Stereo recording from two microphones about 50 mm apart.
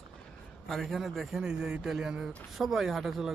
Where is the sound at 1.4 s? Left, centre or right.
Centre.